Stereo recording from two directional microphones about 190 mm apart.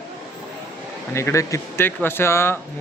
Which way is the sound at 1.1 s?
15° left (ahead or behind).